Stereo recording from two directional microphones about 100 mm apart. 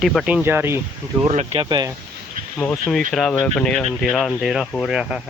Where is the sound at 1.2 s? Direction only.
90° right.